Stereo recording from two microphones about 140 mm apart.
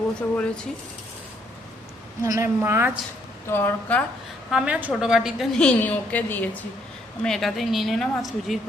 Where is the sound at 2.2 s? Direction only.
20° right (ahead or behind).